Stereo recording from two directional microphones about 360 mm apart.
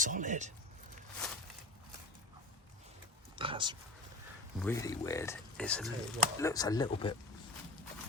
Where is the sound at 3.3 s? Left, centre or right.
Centre.